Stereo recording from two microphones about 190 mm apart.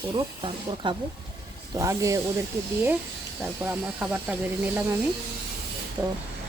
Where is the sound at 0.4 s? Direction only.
25° right (ahead or behind).